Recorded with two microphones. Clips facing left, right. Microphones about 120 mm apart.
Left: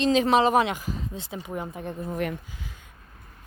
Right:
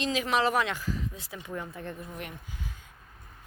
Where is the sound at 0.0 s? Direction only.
30° left (ahead or behind).